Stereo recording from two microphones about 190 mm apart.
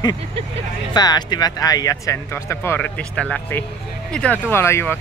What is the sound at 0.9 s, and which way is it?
Speech, 20° left (ahead or behind).